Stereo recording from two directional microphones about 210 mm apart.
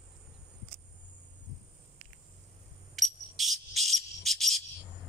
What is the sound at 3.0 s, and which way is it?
Cricket, centre (ahead or behind).